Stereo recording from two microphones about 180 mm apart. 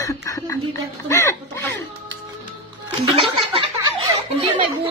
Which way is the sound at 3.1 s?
30° right (ahead or behind).